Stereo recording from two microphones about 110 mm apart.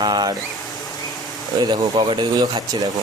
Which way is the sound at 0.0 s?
40° right (ahead or behind).